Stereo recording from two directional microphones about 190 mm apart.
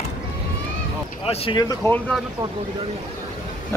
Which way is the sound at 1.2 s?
30° left (ahead or behind).